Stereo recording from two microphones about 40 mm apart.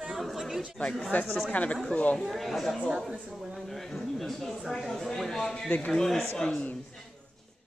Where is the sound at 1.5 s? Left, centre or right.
Left.